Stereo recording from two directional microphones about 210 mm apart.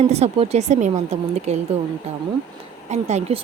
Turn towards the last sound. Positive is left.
turn(degrees=-30)  # may be behind; listen again after turning